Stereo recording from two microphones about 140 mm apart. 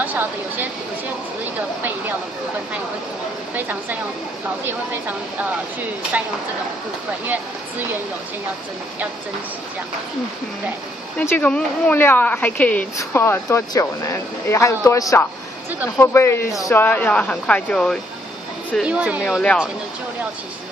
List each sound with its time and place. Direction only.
0.0 s a sound: 15° right (ahead or behind)
3.5 s speech: 15° right (ahead or behind)
11.1 s speech: 10° left (ahead or behind)
18.8 s speech: 10° right (ahead or behind)